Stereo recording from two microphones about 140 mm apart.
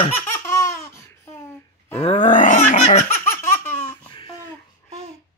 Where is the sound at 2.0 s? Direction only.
45° left (ahead or behind).